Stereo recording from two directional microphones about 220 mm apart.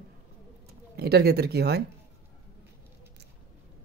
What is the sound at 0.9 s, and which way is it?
Speech, 45° right (ahead or behind).